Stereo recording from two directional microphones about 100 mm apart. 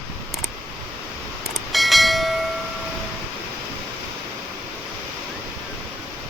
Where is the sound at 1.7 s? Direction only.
Centre (ahead or behind).